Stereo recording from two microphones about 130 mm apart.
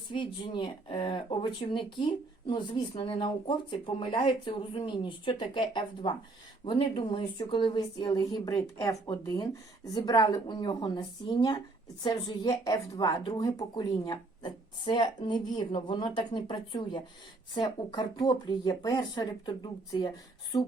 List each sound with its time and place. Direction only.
0.1 s speech: 40° left (ahead or behind)